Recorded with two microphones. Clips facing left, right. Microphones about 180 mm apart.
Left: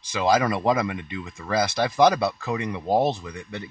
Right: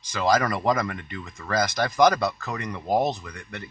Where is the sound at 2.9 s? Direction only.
30° left (ahead or behind).